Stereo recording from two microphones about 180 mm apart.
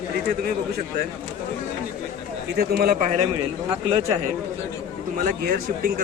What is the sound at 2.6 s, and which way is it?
Speech, 55° right (ahead or behind).